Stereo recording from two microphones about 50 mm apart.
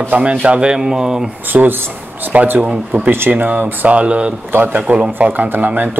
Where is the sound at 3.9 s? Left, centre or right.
Right.